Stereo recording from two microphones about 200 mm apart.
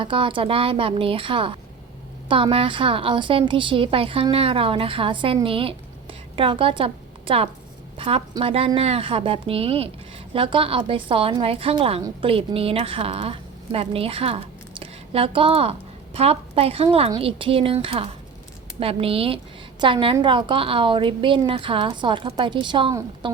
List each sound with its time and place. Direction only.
0.0 s a woman's voice: 25° right (ahead or behind)